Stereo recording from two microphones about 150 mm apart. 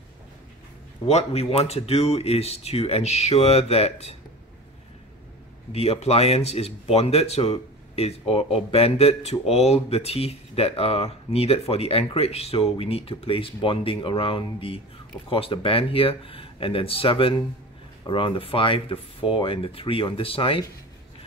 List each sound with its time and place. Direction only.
1.0 s speech: 45° left (ahead or behind)
5.7 s speech: 45° left (ahead or behind)